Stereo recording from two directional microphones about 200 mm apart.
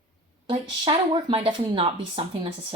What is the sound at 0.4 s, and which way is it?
Speech, 25° right (ahead or behind).